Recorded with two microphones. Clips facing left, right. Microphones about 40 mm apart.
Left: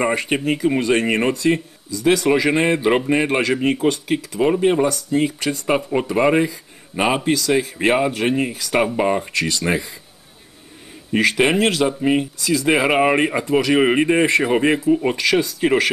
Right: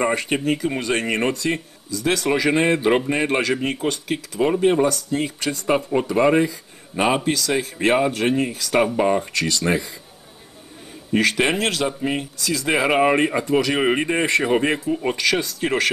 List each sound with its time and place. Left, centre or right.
0.0 s speech: centre
7.3 s speech: centre
11.1 s speech: centre